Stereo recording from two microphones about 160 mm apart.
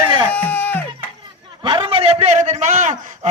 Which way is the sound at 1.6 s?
35° right (ahead or behind).